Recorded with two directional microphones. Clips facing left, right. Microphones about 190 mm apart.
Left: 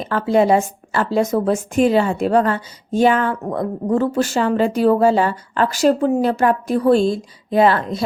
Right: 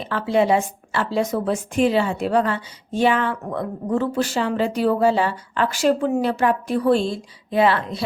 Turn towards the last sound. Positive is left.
turn(degrees=45)  # may be behind; listen again after turning